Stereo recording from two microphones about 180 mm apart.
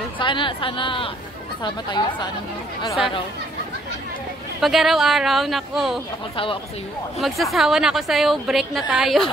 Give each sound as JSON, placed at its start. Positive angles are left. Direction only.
{"t": 0.2, "sound": "a woman's voice", "side_deg": 25}
{"t": 4.6, "sound": "a woman's voice", "side_deg": 0}
{"t": 6.3, "sound": "a woman's voice", "side_deg": 30}
{"t": 7.2, "sound": "a woman's voice", "side_deg": 0}